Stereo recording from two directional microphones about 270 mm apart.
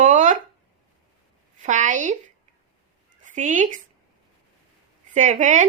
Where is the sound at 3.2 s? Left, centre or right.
Right.